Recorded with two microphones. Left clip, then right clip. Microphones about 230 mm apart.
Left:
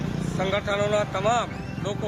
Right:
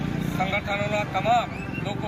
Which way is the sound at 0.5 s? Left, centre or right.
Centre.